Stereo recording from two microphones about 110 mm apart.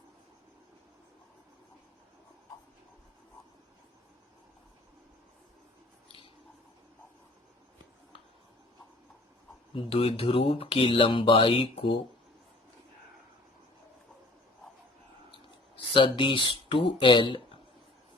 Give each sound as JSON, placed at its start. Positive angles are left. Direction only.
{"t": 9.7, "sound": "speech", "side_deg": 60}
{"t": 15.9, "sound": "speech", "side_deg": 50}